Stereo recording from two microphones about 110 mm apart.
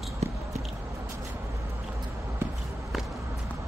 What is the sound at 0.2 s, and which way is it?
Biting, 80° right.